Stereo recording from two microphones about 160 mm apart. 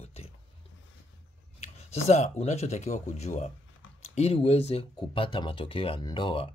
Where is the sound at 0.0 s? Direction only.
40° left (ahead or behind).